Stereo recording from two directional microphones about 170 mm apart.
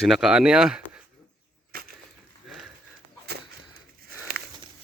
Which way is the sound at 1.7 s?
60° right (ahead or behind).